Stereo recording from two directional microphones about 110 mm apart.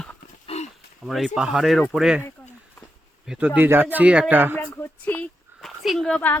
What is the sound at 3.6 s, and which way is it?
Speech, 20° right (ahead or behind).